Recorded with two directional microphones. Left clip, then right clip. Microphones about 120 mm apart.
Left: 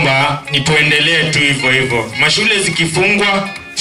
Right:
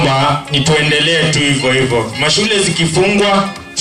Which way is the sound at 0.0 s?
40° left (ahead or behind).